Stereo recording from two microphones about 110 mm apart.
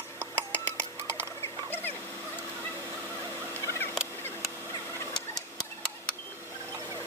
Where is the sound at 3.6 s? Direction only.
20° left (ahead or behind).